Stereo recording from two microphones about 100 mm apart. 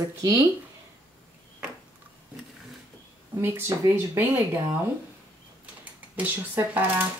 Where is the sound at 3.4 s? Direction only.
20° right (ahead or behind).